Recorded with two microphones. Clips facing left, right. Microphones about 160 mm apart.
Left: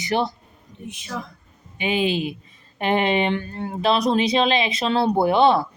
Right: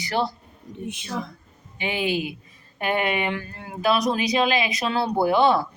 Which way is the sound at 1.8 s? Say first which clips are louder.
Left 3 dB; 20° left (ahead or behind).